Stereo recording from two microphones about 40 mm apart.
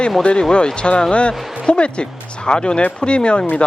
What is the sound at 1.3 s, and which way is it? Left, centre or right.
Speech, centre.